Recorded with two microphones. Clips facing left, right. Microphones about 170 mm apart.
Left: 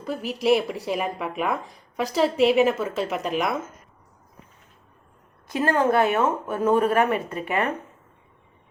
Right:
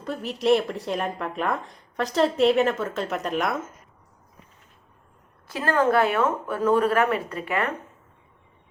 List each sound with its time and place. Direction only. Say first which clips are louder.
0.0 s speech: left 1 dB; 5° left (ahead or behind)
5.5 s speech: left 1 dB; 20° left (ahead or behind)